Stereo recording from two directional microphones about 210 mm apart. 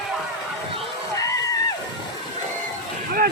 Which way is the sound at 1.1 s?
15° left (ahead or behind).